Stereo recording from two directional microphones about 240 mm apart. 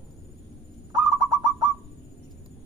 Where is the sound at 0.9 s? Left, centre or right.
Centre.